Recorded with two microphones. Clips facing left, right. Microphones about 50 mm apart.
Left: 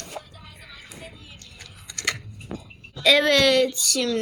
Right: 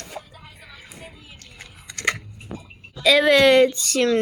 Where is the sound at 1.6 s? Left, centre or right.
Right.